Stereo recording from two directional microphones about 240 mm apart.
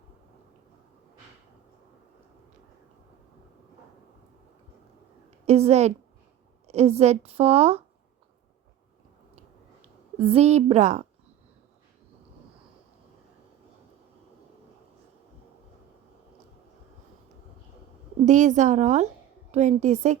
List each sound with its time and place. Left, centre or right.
5.5 s a woman's voice: right
9.8 s a woman's voice: right
18.3 s a woman's voice: right